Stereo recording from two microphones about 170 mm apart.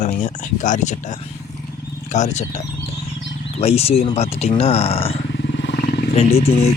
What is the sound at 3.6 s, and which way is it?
Speech, 35° left (ahead or behind).